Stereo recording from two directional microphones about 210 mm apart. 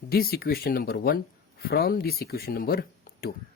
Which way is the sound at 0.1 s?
45° left (ahead or behind).